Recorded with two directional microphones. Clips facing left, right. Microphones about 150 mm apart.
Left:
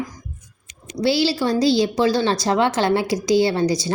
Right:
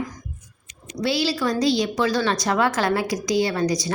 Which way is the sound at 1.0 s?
30° left (ahead or behind).